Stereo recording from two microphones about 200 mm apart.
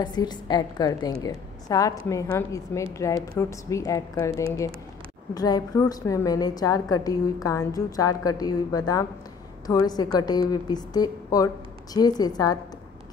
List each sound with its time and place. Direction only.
0.0 s a woman's voice: 20° left (ahead or behind)